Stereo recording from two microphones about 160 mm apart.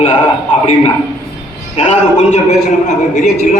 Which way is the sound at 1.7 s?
45° left (ahead or behind).